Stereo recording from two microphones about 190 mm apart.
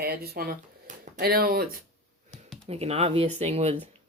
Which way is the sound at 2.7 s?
35° right (ahead or behind).